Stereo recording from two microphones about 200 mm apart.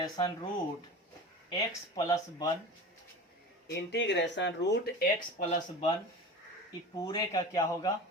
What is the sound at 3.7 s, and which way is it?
Speech, 60° left (ahead or behind).